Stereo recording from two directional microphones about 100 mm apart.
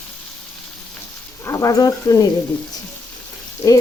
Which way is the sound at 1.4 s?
35° left (ahead or behind).